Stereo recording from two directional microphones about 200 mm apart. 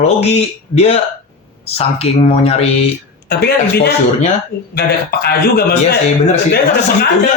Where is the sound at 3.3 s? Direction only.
50° left (ahead or behind).